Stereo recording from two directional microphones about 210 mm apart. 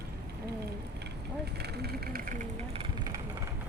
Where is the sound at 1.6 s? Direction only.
50° right (ahead or behind).